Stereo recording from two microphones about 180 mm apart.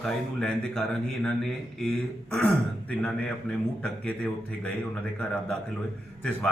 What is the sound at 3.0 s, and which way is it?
Speech, 5° left (ahead or behind).